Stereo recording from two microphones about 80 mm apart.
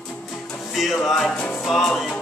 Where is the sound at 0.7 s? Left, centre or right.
Centre.